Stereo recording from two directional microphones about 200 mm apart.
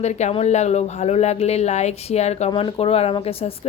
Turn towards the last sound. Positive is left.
turn(degrees=30)  # may be behind; listen again after turning